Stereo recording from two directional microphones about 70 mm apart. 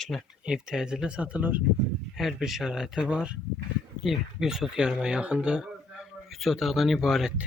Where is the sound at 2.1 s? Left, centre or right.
Centre.